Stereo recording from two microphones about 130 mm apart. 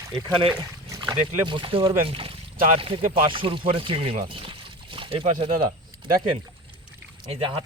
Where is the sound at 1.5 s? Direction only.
40° right (ahead or behind).